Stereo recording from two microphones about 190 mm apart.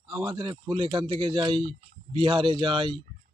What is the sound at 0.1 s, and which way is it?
A man's voice, 25° right (ahead or behind).